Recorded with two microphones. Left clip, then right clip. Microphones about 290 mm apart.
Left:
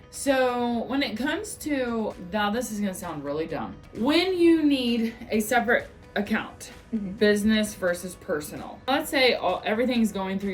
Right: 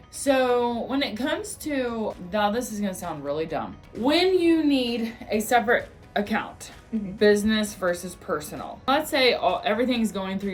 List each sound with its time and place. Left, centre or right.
0.3 s speech: centre